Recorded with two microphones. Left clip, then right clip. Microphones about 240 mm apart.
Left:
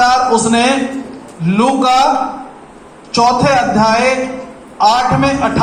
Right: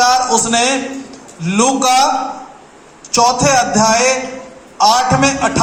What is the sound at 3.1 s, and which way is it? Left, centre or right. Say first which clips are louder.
A man's voice: left 1 dB; right.